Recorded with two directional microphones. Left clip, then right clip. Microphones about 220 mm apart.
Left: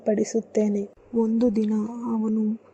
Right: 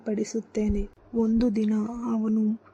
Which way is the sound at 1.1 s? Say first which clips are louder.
Left 3 dB; centre (ahead or behind).